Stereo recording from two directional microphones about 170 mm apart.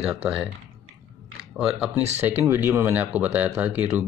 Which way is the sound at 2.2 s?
15° right (ahead or behind).